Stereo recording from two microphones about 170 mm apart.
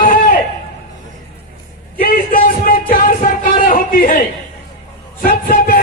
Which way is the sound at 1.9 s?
55° left (ahead or behind).